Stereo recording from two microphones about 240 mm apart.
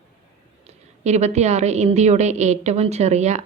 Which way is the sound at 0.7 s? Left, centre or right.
Right.